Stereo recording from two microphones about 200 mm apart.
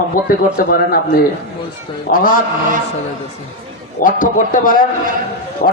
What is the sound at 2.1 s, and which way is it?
Speech, 45° left (ahead or behind).